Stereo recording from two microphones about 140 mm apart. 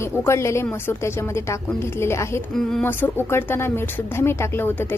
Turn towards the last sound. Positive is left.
turn(degrees=15)  # may be behind; listen again after turning